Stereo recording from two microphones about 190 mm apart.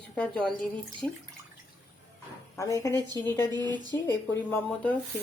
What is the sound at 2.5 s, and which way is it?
Speech, 15° left (ahead or behind).